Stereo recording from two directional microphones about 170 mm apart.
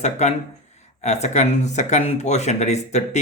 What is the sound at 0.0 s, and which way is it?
Speech, 40° left (ahead or behind).